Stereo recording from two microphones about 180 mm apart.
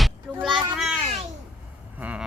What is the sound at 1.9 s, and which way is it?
Vehicle, 10° right (ahead or behind).